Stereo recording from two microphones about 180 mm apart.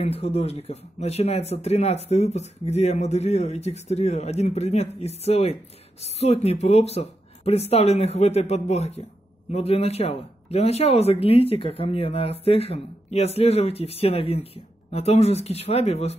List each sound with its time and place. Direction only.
0.0 s a man's voice: 35° left (ahead or behind)